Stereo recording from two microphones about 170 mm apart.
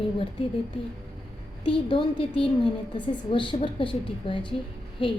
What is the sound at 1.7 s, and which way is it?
A woman's voice, 30° left (ahead or behind).